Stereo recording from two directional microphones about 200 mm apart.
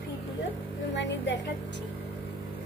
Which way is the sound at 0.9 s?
60° left (ahead or behind).